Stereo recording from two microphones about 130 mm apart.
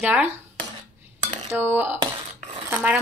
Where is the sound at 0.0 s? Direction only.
10° right (ahead or behind).